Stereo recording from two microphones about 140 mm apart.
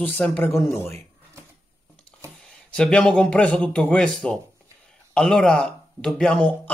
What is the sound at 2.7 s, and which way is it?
Speech, 5° left (ahead or behind).